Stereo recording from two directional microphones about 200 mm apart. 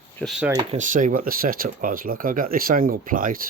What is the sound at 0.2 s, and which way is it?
Speech, centre (ahead or behind).